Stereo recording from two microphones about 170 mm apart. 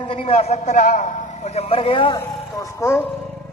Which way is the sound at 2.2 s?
15° left (ahead or behind).